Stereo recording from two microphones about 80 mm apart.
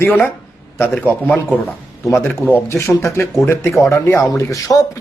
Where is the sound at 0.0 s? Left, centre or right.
Left.